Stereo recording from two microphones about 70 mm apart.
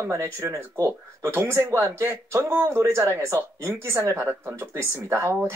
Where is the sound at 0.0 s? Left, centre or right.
Right.